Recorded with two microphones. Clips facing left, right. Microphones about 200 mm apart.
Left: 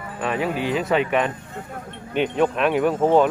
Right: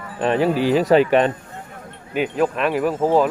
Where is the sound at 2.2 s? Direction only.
5° right (ahead or behind).